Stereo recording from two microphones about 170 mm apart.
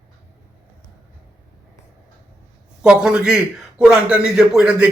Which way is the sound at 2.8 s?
5° right (ahead or behind).